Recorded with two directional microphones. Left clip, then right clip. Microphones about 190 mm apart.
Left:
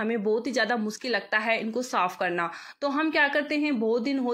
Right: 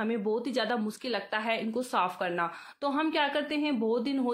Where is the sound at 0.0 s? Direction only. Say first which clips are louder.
Left 4 dB; 5° left (ahead or behind).